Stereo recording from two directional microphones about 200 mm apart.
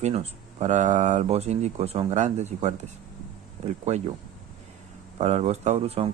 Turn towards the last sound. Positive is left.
turn(degrees=-30)  # may be behind; listen again after turning